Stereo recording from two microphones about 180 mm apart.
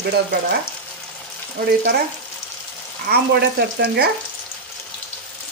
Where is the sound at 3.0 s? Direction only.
60° right (ahead or behind).